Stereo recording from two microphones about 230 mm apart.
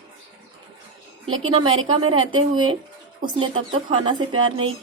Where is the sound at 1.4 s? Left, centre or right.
Right.